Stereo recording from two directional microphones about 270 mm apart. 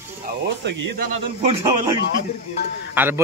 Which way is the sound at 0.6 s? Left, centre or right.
Right.